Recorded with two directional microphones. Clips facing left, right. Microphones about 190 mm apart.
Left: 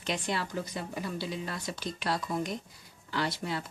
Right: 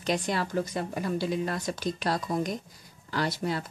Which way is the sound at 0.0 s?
40° right (ahead or behind).